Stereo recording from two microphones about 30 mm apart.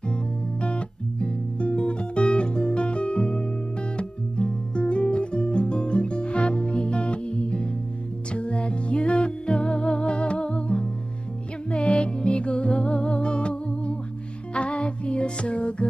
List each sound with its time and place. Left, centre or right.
0.1 s music: left
11.9 s music: left